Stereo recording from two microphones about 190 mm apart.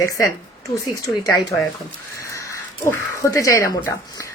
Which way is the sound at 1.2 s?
20° left (ahead or behind).